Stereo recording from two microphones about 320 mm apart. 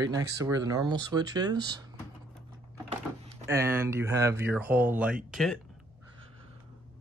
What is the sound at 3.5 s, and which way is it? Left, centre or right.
Speech, centre.